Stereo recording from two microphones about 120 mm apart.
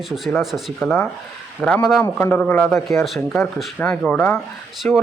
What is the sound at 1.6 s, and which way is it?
Speech, 10° left (ahead or behind).